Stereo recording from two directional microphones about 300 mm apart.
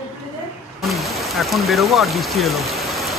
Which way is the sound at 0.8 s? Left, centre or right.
Centre.